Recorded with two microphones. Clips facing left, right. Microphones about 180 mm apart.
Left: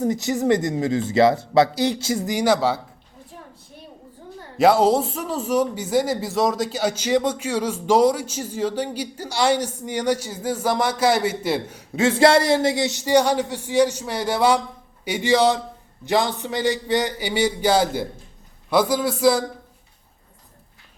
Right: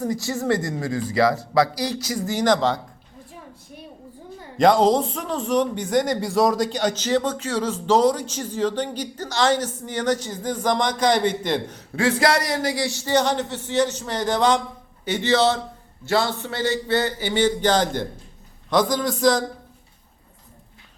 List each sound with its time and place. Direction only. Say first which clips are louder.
0.0 s speech: left 4 dB; 20° left (ahead or behind)
2.3 s speech: even; 10° left (ahead or behind)
4.5 s speech: even; 5° left (ahead or behind)
11.9 s speech: left 4 dB; 25° left (ahead or behind); by 19.5 s 10° left (ahead or behind)